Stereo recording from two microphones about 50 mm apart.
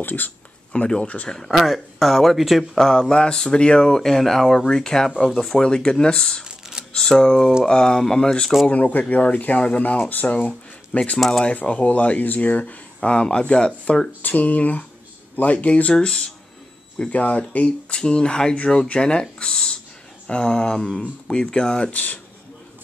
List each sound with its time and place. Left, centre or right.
0.0 s speech: left
0.7 s speech: left
1.5 s speech: centre
2.8 s speech: centre
6.4 s a sound: centre
6.9 s speech: centre
8.6 s speech: left
11.1 s speech: centre
11.4 s speech: left
14.2 s speech: left
17.1 s speech: left
19.3 s a sound: centre
20.2 s speech: centre
21.9 s speech: left